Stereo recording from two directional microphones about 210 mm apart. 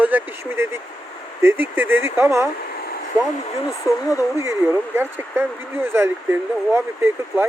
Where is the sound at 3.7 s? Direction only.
15° left (ahead or behind).